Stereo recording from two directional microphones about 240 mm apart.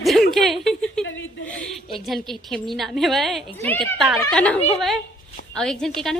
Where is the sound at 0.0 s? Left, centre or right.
Centre.